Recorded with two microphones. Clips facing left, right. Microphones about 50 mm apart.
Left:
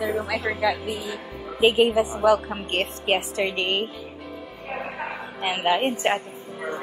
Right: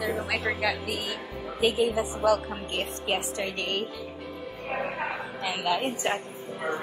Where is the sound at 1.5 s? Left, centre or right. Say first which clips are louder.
Left 6 dB; left.